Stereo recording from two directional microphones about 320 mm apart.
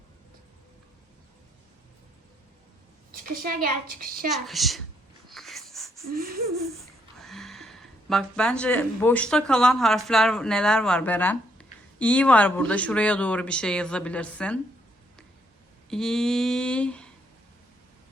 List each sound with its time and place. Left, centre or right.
3.1 s a woman's voice: right
4.4 s speech: centre
5.3 s a sound: centre
6.1 s a woman's voice: right
6.6 s a sound: centre
10.1 s speech: centre
15.9 s speech: centre